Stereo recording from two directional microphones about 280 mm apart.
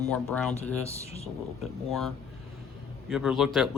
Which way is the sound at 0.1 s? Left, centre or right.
Centre.